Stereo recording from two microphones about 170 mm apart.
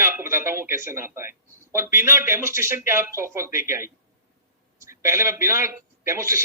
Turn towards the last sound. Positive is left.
turn(degrees=-15)  # may be behind; listen again after turning